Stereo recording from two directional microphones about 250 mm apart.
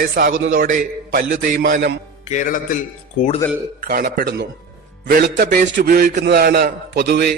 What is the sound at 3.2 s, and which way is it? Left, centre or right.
Speech, left.